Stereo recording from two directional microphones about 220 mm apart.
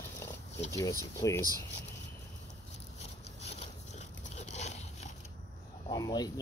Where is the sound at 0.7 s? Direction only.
15° left (ahead or behind).